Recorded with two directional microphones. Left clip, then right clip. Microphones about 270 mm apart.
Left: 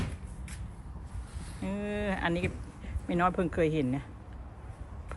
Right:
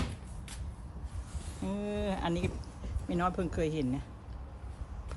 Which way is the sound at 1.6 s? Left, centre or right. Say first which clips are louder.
Left 1 dB; centre.